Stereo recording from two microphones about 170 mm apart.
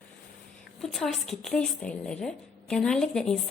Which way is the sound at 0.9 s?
Centre (ahead or behind).